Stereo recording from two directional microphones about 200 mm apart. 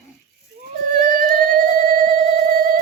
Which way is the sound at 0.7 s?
45° right (ahead or behind).